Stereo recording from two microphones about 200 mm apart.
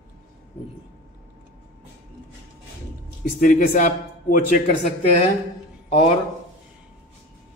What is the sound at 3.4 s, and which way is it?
A man's voice, 40° left (ahead or behind).